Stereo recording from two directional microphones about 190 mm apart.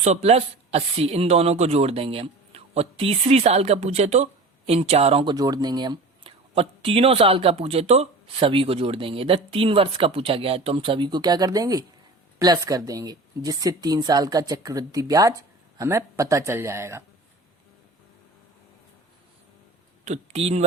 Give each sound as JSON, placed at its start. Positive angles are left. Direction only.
{"t": 0.0, "sound": "speech", "side_deg": -35}
{"t": 20.1, "sound": "speech", "side_deg": -35}